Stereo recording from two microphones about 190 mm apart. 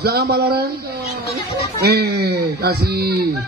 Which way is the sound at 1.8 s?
60° right (ahead or behind).